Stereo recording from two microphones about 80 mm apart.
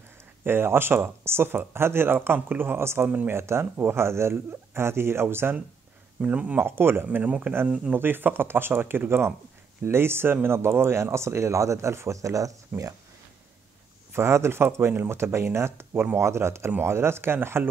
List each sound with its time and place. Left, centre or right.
0.4 s speech: right
3.1 s speech: right
3.3 s speech: right
6.2 s speech: centre
6.6 s speech: right
8.0 s speech: right
14.1 s speech: right